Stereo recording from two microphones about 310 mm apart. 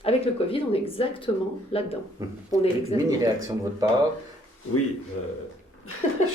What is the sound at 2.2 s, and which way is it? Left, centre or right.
Speech, centre.